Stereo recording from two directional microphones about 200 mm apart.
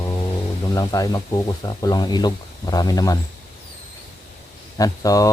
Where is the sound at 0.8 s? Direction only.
15° left (ahead or behind).